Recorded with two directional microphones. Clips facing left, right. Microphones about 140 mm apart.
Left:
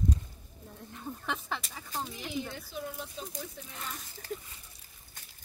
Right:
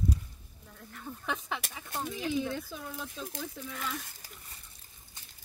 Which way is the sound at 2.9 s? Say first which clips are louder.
Right 1 dB; 90° right.